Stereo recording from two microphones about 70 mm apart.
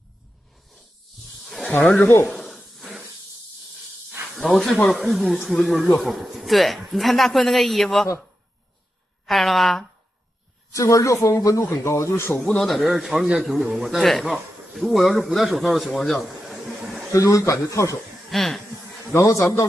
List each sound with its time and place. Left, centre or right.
1.2 s snake: centre
1.7 s speech: centre
2.2 s a sound: centre
4.3 s speech: centre
9.2 s speech: centre
10.7 s speech: left
12.4 s speech: centre
15.9 s a sound: centre
17.1 s speech: left
18.3 s speech: centre
19.1 s speech: left